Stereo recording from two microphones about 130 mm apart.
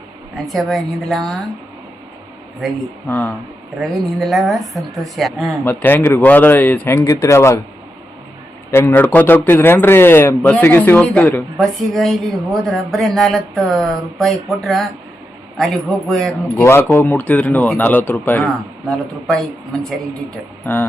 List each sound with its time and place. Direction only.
0.3 s speech: centre (ahead or behind)
3.1 s a man's voice: 15° left (ahead or behind)
3.8 s speech: centre (ahead or behind)
5.6 s a man's voice: 15° left (ahead or behind)
8.7 s a man's voice: 20° left (ahead or behind)
11.9 s speech: centre (ahead or behind)
16.6 s a man's voice: 20° left (ahead or behind)